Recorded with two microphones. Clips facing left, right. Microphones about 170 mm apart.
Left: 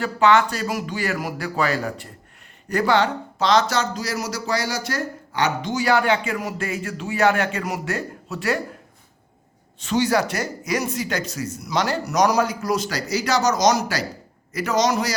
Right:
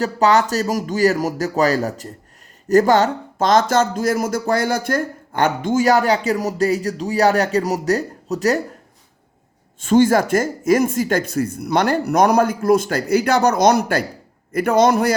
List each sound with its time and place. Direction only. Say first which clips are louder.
0.0 s speech: right 2 dB; 40° right (ahead or behind)
9.8 s a man's voice: right 6 dB; 50° right (ahead or behind)